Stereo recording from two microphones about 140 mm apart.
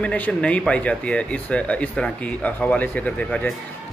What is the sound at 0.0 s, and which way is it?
Speech, 10° left (ahead or behind).